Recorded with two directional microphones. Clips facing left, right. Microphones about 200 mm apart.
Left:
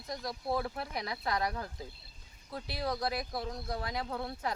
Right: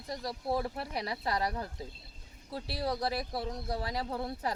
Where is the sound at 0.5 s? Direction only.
30° right (ahead or behind).